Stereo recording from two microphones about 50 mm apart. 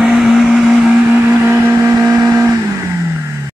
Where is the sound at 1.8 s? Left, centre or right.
Right.